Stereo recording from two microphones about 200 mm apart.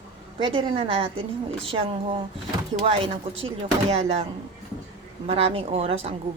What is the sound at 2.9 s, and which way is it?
A woman's voice, 30° right (ahead or behind).